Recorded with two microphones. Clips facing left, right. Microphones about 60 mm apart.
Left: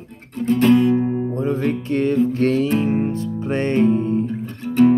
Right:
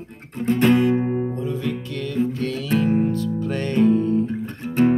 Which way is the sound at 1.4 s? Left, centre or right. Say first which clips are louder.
Left 5 dB; left.